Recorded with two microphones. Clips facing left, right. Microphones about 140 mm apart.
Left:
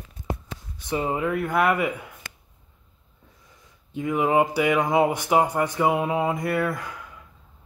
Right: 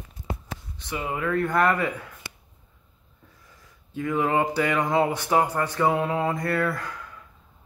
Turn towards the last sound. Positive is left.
turn(degrees=15)  # may be behind; listen again after turning